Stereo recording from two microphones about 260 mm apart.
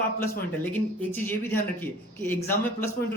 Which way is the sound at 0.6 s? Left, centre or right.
Centre.